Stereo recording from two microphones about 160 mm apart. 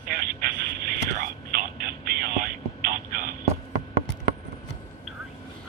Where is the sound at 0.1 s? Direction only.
65° right (ahead or behind).